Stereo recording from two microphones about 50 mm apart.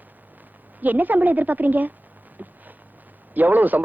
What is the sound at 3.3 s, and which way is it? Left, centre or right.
Speech, right.